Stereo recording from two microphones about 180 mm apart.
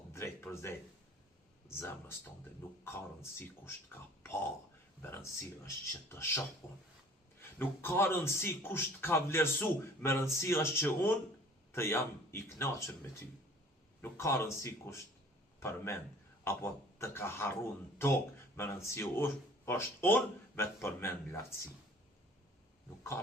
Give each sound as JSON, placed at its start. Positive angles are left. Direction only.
{"t": 0.1, "sound": "a sound", "side_deg": 15}
{"t": 1.6, "sound": "speech", "side_deg": 15}
{"t": 7.6, "sound": "speech", "side_deg": 15}
{"t": 14.0, "sound": "speech", "side_deg": 15}